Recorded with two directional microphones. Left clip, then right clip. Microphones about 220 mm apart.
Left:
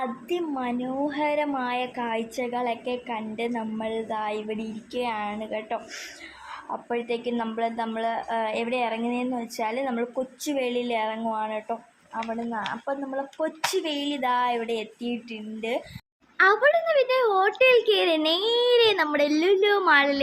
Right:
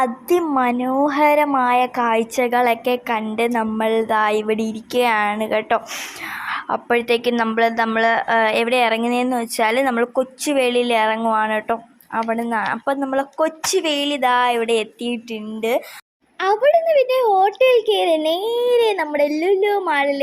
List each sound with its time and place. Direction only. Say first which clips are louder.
0.0 s a woman's voice: right 11 dB; 25° right (ahead or behind)
12.1 s a woman's voice: right 10 dB; 35° right (ahead or behind)
17.1 s a child's voice: right 6 dB; 10° right (ahead or behind)